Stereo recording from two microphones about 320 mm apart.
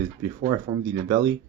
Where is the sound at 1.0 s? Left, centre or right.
Centre.